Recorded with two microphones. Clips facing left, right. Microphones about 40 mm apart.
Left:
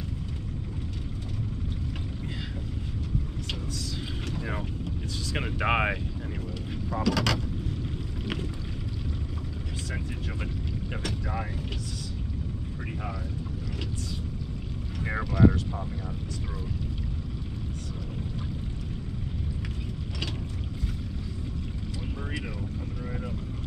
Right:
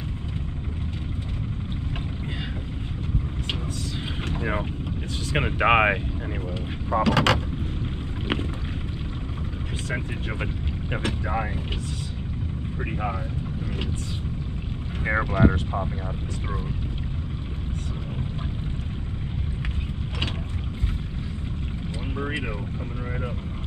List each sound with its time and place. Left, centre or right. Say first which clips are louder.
4.3 s vehicle: right 7 dB; right
5.3 s speech: right 7 dB; right
9.8 s speech: right 7 dB; right
15.0 s speech: right 3 dB; right